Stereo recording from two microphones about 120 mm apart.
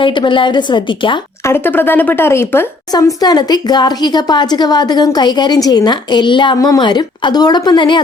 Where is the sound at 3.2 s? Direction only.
35° left (ahead or behind).